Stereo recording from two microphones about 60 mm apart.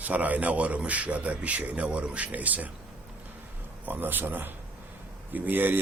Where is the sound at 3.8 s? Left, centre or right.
Right.